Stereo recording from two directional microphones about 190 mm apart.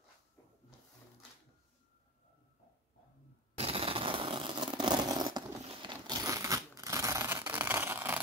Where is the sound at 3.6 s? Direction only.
30° right (ahead or behind).